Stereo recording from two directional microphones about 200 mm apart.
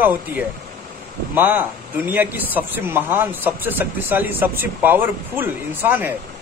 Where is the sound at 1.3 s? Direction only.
10° right (ahead or behind).